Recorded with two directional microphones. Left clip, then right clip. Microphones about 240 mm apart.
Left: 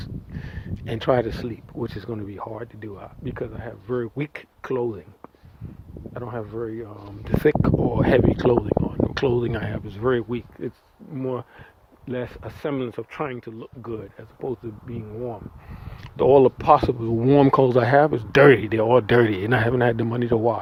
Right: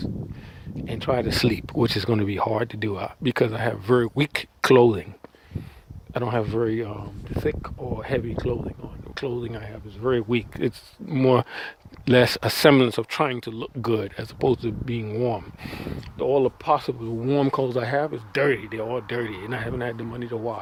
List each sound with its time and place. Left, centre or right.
0.9 s speech: centre
1.5 s speech: right
6.1 s speech: right
7.3 s speech: left
10.0 s speech: centre
11.1 s speech: right
16.1 s speech: centre